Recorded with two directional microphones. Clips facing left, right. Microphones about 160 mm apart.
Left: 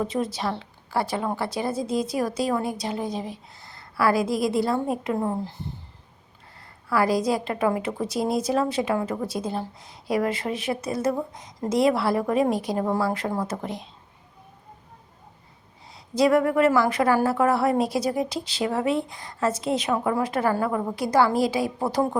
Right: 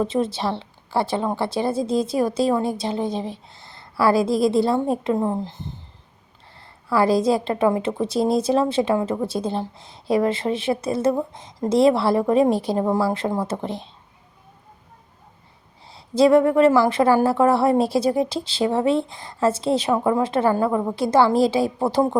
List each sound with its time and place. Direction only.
0.0 s a woman's voice: 25° right (ahead or behind)
6.9 s a woman's voice: 25° right (ahead or behind)
15.9 s a woman's voice: 30° right (ahead or behind)